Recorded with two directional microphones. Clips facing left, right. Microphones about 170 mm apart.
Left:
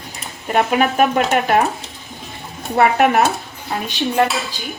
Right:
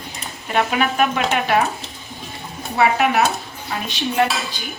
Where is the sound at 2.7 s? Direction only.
50° left (ahead or behind).